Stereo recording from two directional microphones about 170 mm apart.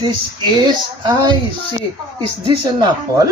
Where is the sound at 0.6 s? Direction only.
25° right (ahead or behind).